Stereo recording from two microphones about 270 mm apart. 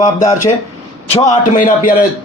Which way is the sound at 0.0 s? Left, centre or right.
Left.